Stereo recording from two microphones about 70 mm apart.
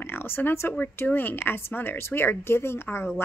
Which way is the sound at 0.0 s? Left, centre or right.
Left.